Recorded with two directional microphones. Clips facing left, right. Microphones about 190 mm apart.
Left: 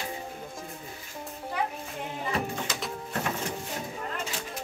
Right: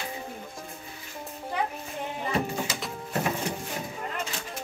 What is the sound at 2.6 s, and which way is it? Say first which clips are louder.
Music: even; 5° right (ahead or behind).